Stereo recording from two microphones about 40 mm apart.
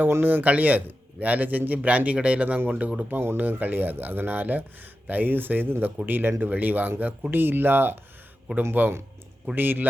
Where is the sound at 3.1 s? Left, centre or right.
Right.